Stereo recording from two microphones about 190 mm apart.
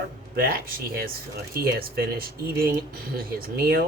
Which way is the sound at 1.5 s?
50° right (ahead or behind).